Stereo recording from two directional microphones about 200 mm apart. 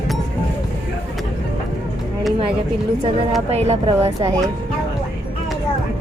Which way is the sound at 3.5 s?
30° right (ahead or behind).